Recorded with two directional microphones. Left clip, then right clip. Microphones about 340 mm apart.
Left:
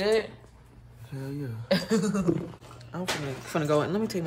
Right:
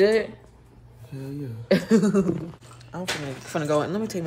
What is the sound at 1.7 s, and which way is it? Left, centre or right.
Speech, centre.